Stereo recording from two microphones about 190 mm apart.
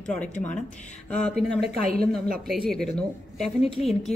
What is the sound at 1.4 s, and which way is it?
Speech, 55° right (ahead or behind).